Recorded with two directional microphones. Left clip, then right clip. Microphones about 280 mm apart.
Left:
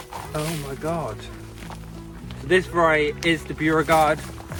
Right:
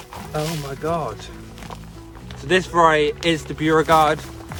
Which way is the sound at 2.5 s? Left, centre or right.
Centre.